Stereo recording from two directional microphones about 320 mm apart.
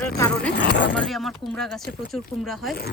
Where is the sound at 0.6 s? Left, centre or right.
Left.